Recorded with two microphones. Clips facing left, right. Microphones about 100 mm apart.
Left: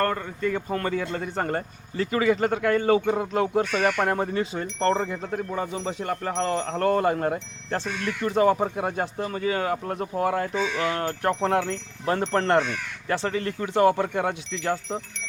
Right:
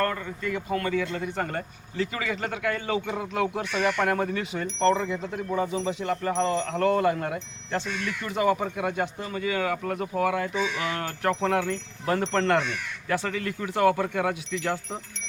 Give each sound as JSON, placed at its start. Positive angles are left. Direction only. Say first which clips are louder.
{"t": 0.0, "sound": "speech", "louder": "left 3 dB", "side_deg": 35}
{"t": 4.8, "sound": "speech", "louder": "right 1 dB", "side_deg": 45}